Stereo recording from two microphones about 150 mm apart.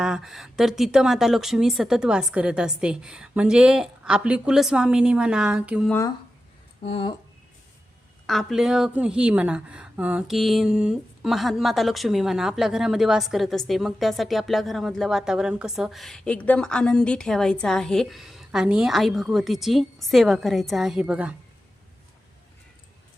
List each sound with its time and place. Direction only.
0.0 s speech: 5° right (ahead or behind)
6.8 s speech: 40° left (ahead or behind)
8.3 s speech: centre (ahead or behind)